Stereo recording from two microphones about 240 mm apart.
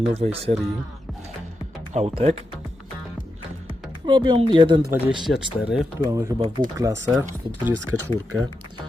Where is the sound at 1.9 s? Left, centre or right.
Right.